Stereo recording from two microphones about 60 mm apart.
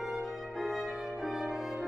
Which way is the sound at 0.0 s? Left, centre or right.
Centre.